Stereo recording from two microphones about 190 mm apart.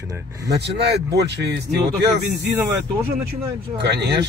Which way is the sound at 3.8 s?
60° right (ahead or behind).